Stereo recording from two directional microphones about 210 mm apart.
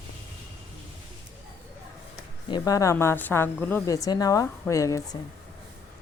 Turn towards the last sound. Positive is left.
turn(degrees=15)  # may be behind; listen again after turning